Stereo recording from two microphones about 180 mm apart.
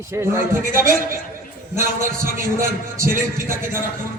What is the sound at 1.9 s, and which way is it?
Speech, 50° right (ahead or behind).